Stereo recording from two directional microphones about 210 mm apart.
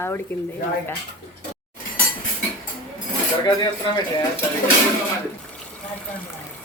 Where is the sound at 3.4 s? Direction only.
20° left (ahead or behind).